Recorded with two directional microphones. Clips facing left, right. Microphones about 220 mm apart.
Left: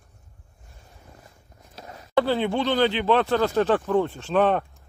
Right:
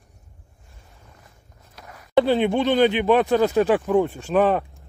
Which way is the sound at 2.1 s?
20° right (ahead or behind).